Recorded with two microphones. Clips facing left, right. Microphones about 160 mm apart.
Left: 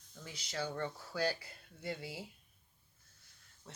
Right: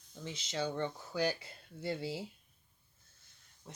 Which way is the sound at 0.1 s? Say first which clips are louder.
Right 4 dB; 20° right (ahead or behind).